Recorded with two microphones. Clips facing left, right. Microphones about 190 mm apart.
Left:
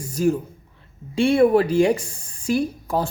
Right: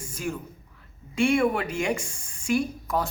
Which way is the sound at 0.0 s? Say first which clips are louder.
Left 12 dB; 35° left (ahead or behind).